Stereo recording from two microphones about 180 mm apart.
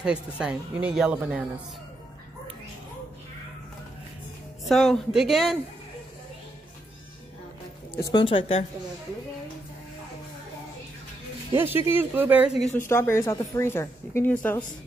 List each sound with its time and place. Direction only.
0.0 s speech: 5° right (ahead or behind)
4.6 s speech: centre (ahead or behind)
8.0 s speech: 25° left (ahead or behind)
11.5 s speech: 10° right (ahead or behind)
12.7 s speech: 15° left (ahead or behind)